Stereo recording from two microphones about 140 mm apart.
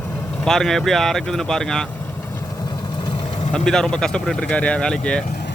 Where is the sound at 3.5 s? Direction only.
5° left (ahead or behind).